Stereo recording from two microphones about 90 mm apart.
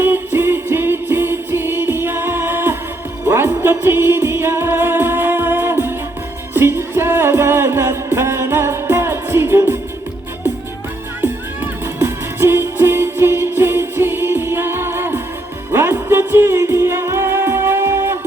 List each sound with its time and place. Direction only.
0.0 s music: 25° right (ahead or behind)
11.2 s music: 25° right (ahead or behind)